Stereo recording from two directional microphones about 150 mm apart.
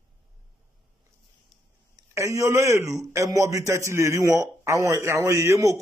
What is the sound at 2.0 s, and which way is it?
A man's voice, 20° right (ahead or behind).